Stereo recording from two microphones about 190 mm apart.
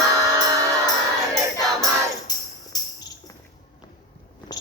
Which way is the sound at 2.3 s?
20° left (ahead or behind).